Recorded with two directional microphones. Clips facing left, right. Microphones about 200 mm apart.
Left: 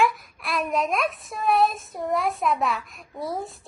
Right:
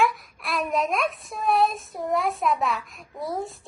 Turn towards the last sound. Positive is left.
turn(degrees=0)  # may be behind; listen again after turning